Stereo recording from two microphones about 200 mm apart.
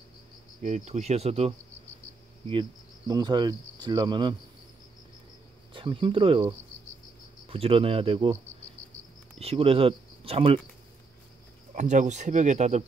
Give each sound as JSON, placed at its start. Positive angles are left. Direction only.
{"t": 0.6, "sound": "speech", "side_deg": -35}
{"t": 3.1, "sound": "cricket", "side_deg": -20}
{"t": 5.7, "sound": "speech", "side_deg": -25}
{"t": 7.4, "sound": "cricket", "side_deg": -30}
{"t": 9.4, "sound": "speech", "side_deg": -30}
{"t": 11.7, "sound": "speech", "side_deg": -35}